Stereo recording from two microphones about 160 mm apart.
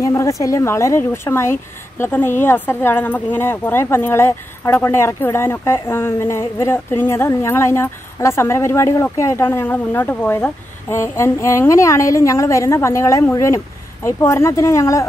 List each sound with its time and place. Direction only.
0.0 s speech: 20° left (ahead or behind)